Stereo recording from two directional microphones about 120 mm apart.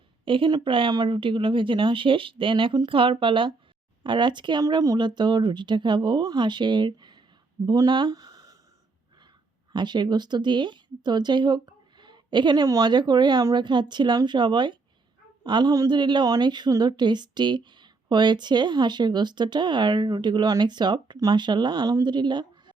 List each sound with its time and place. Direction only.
0.3 s a woman's voice: 45° right (ahead or behind)
9.7 s a woman's voice: 40° right (ahead or behind)